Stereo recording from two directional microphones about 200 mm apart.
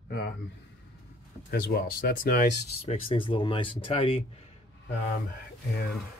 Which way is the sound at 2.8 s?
25° left (ahead or behind).